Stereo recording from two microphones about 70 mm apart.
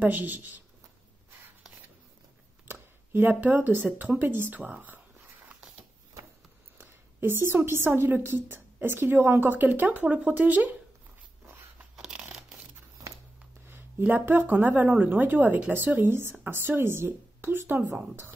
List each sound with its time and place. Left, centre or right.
0.0 s speech: right
2.7 s speech: right
6.8 s speech: right
11.4 s a sound: right
12.0 s crumpling: centre
13.7 s speech: right